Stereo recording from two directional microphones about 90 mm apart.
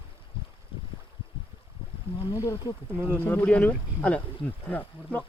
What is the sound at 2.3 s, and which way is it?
Speech, 40° left (ahead or behind).